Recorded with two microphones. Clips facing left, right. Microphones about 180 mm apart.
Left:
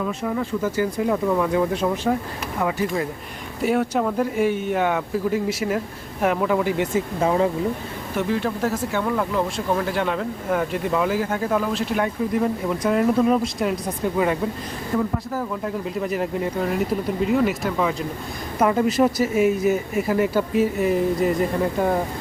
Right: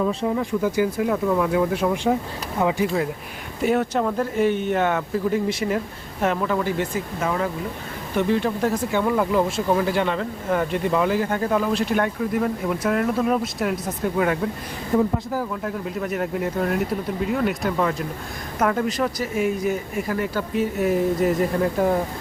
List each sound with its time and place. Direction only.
0.3 s speech: 15° right (ahead or behind)
3.6 s speech: 5° left (ahead or behind)
7.2 s speech: 25° left (ahead or behind)
8.1 s speech: centre (ahead or behind)
14.9 s speech: 20° right (ahead or behind)
15.4 s speech: centre (ahead or behind)